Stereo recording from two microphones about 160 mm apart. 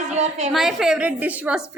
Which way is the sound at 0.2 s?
45° right (ahead or behind).